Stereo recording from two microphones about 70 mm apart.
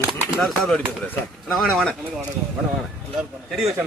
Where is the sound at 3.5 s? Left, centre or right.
Centre.